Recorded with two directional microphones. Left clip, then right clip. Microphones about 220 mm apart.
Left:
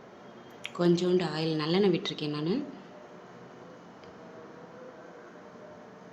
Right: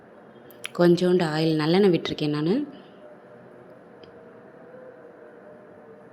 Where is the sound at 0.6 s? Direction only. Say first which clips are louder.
Right 7 dB; 25° right (ahead or behind).